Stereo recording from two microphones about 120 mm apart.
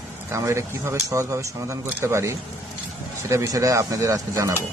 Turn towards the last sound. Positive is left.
turn(degrees=-25)  # may be behind; listen again after turning